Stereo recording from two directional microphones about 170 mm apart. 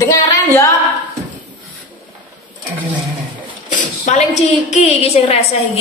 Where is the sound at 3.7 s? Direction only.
45° left (ahead or behind).